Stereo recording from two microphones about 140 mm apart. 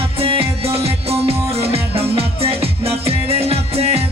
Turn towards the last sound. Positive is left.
turn(degrees=-45)  # may be behind; listen again after turning